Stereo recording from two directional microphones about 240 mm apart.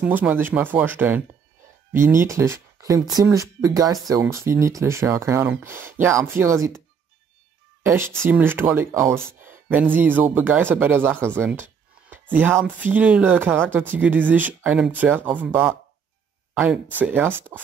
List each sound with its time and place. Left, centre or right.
0.0 s speech: centre
7.8 s speech: centre
17.0 s speech: centre